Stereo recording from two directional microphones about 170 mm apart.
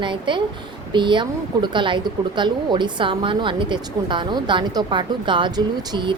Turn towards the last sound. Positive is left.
turn(degrees=-30)  # may be behind; listen again after turning